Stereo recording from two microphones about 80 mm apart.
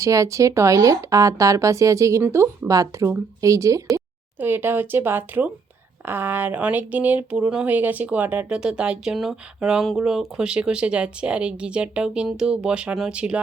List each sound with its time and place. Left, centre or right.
0.0 s speech: right
4.4 s speech: right